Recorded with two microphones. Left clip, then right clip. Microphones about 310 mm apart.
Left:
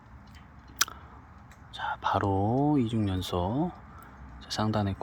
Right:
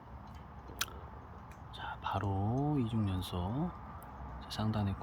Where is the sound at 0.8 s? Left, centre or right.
Centre.